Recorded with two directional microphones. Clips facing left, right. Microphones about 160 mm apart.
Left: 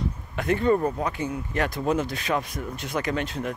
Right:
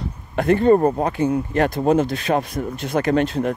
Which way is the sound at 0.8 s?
50° right (ahead or behind).